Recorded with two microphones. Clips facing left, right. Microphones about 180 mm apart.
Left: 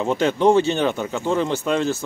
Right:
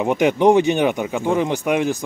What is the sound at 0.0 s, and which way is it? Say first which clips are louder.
Speech: right 2 dB; 15° right (ahead or behind).